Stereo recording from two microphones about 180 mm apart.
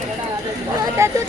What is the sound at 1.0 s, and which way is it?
Speech, 15° right (ahead or behind).